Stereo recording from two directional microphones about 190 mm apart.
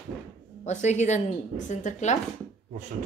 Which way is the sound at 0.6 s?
35° left (ahead or behind).